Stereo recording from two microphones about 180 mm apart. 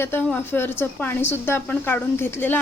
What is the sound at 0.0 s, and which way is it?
Speech, 10° left (ahead or behind).